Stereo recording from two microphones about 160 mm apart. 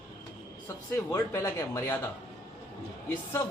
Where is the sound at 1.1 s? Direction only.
20° left (ahead or behind).